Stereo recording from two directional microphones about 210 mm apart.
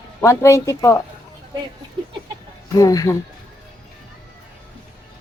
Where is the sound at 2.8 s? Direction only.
15° left (ahead or behind).